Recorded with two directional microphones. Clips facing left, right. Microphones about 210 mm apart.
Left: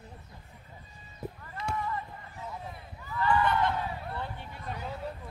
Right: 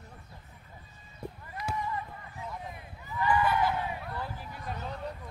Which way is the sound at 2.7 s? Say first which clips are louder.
Left 1 dB; 15° right (ahead or behind).